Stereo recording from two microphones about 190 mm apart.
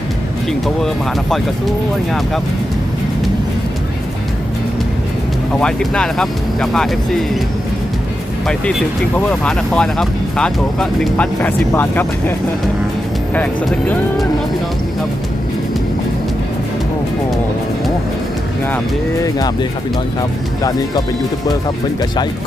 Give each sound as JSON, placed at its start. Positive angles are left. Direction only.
{"t": 5.5, "sound": "speech", "side_deg": 5}
{"t": 8.4, "sound": "speech", "side_deg": 5}
{"t": 13.3, "sound": "speech", "side_deg": 5}
{"t": 20.6, "sound": "speech", "side_deg": 20}